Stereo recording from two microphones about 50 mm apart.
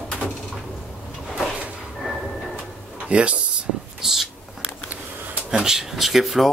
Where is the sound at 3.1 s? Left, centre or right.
Right.